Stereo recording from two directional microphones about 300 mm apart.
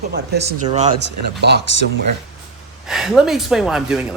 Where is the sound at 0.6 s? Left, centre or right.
Right.